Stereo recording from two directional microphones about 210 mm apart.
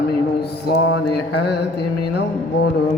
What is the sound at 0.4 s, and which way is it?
Mantra, 55° left (ahead or behind).